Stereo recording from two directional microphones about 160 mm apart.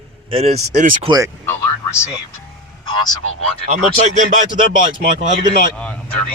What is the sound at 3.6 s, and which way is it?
Speech, 45° right (ahead or behind).